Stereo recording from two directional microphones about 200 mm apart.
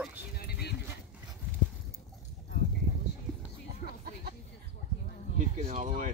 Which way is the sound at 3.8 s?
55° left (ahead or behind).